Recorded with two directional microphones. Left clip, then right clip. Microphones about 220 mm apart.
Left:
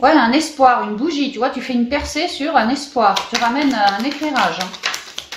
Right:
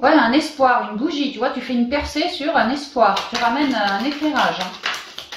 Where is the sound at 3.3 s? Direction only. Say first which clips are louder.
Left 2 dB; 20° left (ahead or behind).